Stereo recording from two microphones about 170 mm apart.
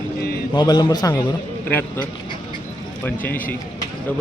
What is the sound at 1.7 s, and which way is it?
Speech, 10° left (ahead or behind).